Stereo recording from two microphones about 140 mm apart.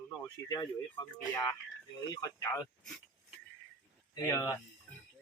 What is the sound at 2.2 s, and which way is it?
Speech, 25° left (ahead or behind).